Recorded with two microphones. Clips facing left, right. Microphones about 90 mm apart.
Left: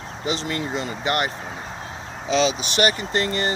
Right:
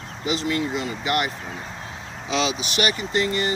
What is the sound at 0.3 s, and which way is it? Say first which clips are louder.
Speech: right 2 dB; 40° left (ahead or behind).